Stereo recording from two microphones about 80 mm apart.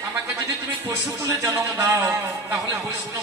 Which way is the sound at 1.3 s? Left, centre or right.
Right.